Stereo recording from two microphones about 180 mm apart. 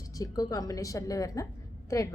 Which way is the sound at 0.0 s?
20° left (ahead or behind).